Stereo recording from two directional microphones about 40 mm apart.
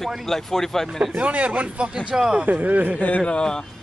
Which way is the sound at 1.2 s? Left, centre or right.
Right.